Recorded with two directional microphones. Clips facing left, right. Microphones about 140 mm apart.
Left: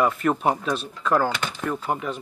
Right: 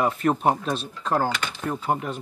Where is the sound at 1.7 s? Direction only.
45° right (ahead or behind).